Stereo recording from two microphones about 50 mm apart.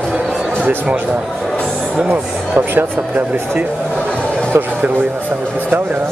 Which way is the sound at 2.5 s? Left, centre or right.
Right.